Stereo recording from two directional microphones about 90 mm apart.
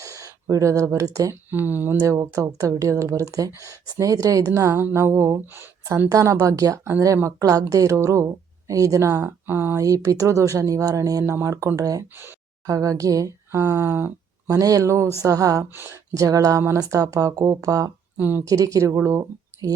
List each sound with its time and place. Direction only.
0.0 s speech: 40° right (ahead or behind)
1.5 s speech: 20° right (ahead or behind)
2.0 s speech: 40° right (ahead or behind)
9.5 s speech: 25° right (ahead or behind)
9.7 s speech: 40° right (ahead or behind)
14.5 s speech: 40° right (ahead or behind)
15.7 s speech: 25° right (ahead or behind)
16.1 s speech: 40° right (ahead or behind)
18.2 s speech: 20° right (ahead or behind)
18.4 s speech: 40° right (ahead or behind)